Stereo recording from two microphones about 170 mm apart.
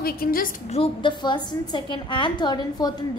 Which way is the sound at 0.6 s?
35° left (ahead or behind).